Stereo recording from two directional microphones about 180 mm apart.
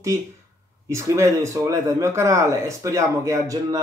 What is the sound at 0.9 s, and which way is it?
Speech, 15° right (ahead or behind).